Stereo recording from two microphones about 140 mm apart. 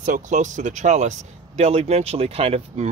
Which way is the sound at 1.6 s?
50° right (ahead or behind).